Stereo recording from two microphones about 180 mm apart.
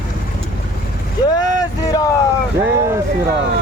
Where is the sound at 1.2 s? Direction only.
20° left (ahead or behind).